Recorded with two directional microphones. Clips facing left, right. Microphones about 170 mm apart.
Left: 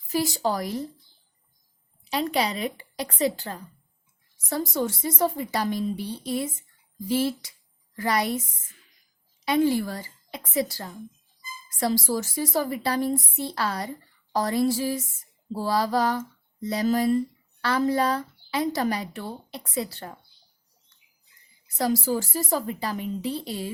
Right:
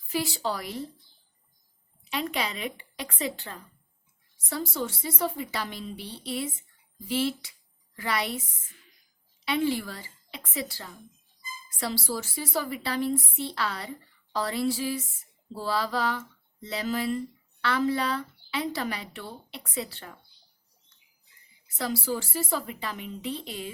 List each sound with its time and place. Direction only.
0.1 s a woman's voice: 40° left (ahead or behind)
2.0 s a woman's voice: 40° left (ahead or behind)
9.4 s a woman's voice: 40° left (ahead or behind)
21.8 s a woman's voice: 40° left (ahead or behind)